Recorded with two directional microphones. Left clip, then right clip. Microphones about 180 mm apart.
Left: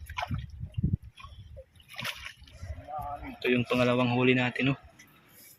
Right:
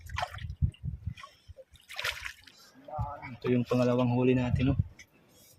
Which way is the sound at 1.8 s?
15° right (ahead or behind).